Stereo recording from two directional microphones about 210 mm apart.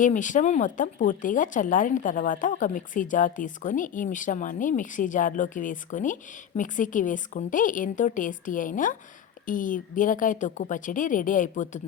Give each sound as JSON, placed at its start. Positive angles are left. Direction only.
{"t": 0.0, "sound": "speech", "side_deg": 35}